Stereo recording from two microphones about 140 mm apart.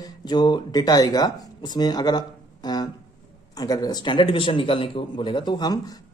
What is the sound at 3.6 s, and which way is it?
Speech, 25° left (ahead or behind).